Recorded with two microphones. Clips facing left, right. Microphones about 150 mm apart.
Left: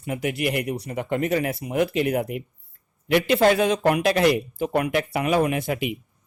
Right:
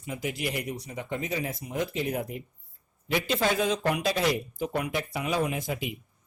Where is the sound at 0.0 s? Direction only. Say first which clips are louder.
Left 7 dB; 60° left (ahead or behind).